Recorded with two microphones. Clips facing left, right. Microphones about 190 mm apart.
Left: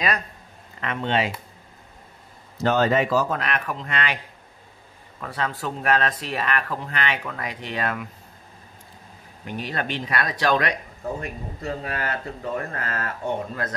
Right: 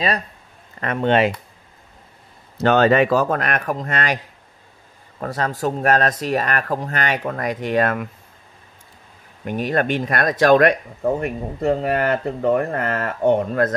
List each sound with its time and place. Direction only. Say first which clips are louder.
0.7 s speech: right 7 dB; 50° right (ahead or behind)
2.5 s speech: right 5 dB; 70° right (ahead or behind); by 4.2 s 45° right (ahead or behind)
5.2 s speech: right 6 dB; 40° right (ahead or behind)
9.4 s speech: right 9 dB; 50° right (ahead or behind)